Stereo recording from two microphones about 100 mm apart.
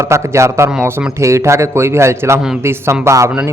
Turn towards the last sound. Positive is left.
turn(degrees=-30)  # may be behind; listen again after turning